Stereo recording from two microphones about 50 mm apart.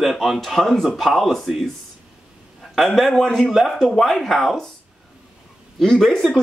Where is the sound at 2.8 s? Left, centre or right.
Centre.